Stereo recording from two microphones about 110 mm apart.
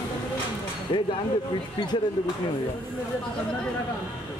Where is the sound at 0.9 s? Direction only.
45° left (ahead or behind).